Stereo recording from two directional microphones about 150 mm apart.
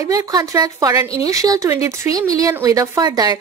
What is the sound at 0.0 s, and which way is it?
Speech, 20° right (ahead or behind).